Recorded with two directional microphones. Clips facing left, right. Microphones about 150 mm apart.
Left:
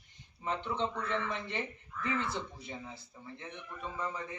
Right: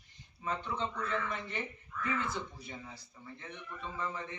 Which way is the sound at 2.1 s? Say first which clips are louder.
Left 1 dB; 25° left (ahead or behind).